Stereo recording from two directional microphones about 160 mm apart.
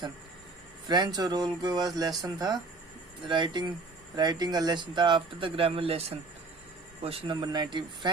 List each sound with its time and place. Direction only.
0.9 s speech: 25° right (ahead or behind)